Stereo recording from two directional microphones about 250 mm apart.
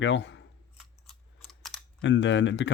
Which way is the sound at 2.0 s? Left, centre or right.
Left.